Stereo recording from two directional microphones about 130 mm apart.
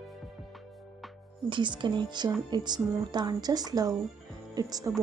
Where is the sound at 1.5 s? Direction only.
40° right (ahead or behind).